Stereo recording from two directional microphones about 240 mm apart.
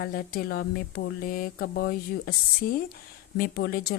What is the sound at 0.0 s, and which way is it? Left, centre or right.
Speech, left.